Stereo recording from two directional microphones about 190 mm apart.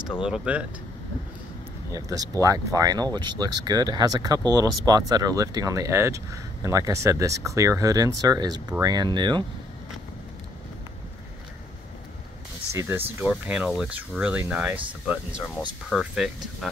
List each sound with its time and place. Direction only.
0.2 s speech: 5° right (ahead or behind)
1.9 s speech: 15° right (ahead or behind)
12.7 s speech: 10° right (ahead or behind)
15.9 s speech: centre (ahead or behind)